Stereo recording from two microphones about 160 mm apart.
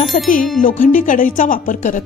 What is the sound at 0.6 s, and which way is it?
A woman's voice, 55° left (ahead or behind).